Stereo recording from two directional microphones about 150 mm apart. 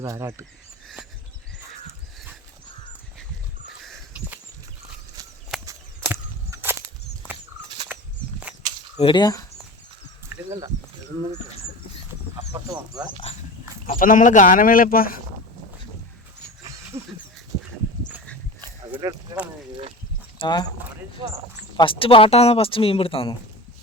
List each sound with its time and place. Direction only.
0.0 s speech: 20° right (ahead or behind)
3.7 s a sound: 5° right (ahead or behind)
5.6 s whip: 15° right (ahead or behind)
7.9 s a sound: 10° right (ahead or behind)
9.0 s speech: 35° left (ahead or behind)
10.3 s a sound: 10° right (ahead or behind)
12.5 s speech: 25° right (ahead or behind)
13.8 s speech: 70° left (ahead or behind)
16.6 s dog: 20° right (ahead or behind)
18.9 s a sound: 10° right (ahead or behind)
20.4 s speech: 30° left (ahead or behind)
21.8 s speech: 35° left (ahead or behind)